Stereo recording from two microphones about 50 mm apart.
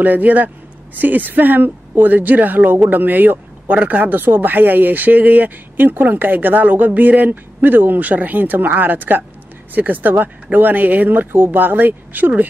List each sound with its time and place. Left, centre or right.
0.0 s speech: right